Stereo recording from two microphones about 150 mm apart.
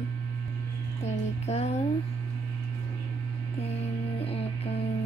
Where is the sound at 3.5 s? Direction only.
45° left (ahead or behind).